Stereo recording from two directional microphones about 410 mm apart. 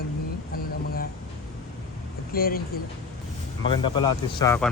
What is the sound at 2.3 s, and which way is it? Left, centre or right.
Speech, left.